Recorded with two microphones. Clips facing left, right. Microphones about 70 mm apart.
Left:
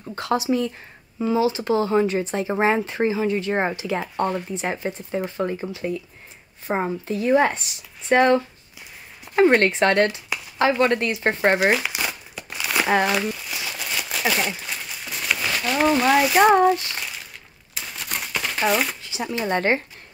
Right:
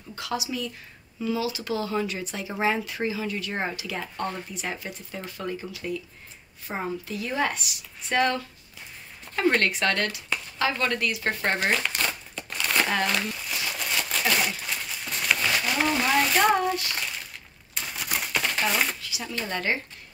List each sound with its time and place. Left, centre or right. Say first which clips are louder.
0.1 s speech: left 9 dB; left
11.5 s crumpling: left 6 dB; centre
14.6 s a sound: left 1 dB; centre
16.9 s crumpling: even; centre
19.0 s a sound: left 7 dB; left
19.5 s speech: left 7 dB; left